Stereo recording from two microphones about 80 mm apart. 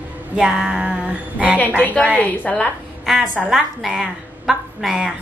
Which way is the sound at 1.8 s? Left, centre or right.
Left.